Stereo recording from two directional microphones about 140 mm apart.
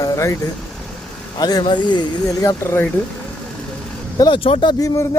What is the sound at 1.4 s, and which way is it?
Speech, 30° left (ahead or behind).